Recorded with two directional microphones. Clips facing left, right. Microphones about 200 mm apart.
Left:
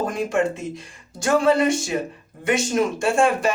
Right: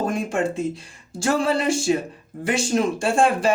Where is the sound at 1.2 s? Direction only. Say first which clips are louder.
Left 3 dB; 30° right (ahead or behind).